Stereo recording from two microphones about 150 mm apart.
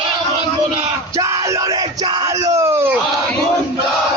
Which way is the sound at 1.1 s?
20° right (ahead or behind).